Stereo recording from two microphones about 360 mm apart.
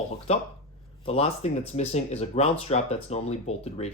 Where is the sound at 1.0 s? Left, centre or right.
Centre.